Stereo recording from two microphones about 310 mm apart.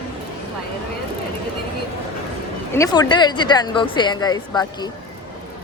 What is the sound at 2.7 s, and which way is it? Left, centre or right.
Speech, centre.